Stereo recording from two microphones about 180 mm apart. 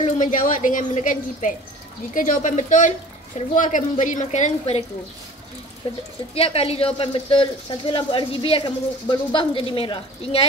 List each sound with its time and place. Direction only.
0.0 s a woman's voice: 45° left (ahead or behind)
5.8 s speech: 30° left (ahead or behind)